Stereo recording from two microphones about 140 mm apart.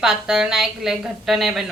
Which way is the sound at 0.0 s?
5° right (ahead or behind).